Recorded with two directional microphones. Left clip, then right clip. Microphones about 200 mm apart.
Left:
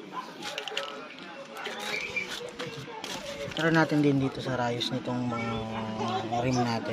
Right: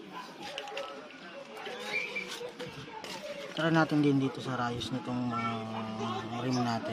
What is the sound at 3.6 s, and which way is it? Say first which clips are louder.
Speech: left 3 dB; 10° right (ahead or behind).